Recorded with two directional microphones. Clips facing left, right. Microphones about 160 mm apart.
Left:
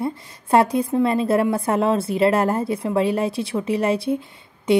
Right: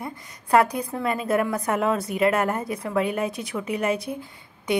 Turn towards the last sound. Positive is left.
turn(degrees=25)  # may be behind; listen again after turning